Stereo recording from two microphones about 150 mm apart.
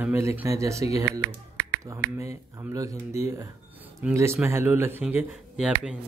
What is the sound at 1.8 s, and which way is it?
Speech, 20° right (ahead or behind).